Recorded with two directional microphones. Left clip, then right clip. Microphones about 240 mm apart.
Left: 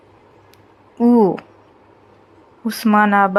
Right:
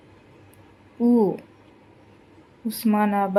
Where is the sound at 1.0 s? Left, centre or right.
Left.